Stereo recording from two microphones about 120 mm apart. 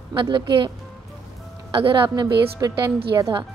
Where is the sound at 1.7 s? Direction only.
45° right (ahead or behind).